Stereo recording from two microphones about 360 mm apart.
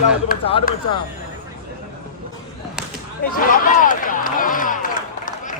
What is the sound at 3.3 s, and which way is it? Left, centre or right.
Speech, left.